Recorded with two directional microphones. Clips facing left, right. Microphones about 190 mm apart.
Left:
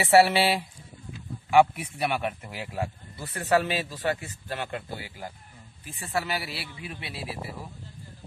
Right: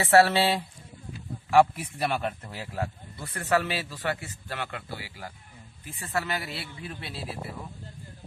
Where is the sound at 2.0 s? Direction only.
5° left (ahead or behind).